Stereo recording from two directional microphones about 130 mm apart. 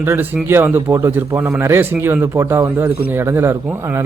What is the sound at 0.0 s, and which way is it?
A man's voice, 15° right (ahead or behind).